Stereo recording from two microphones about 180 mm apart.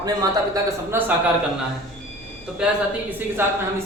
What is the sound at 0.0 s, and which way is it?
Speech, 20° right (ahead or behind).